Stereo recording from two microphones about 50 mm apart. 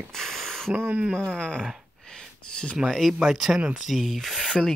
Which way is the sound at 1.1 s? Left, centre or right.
Centre.